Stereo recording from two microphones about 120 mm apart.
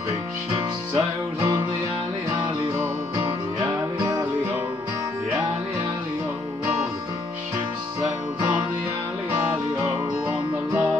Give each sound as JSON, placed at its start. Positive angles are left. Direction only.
{"t": 0.9, "sound": "music", "side_deg": -25}
{"t": 3.6, "sound": "music", "side_deg": -30}
{"t": 9.3, "sound": "music", "side_deg": -15}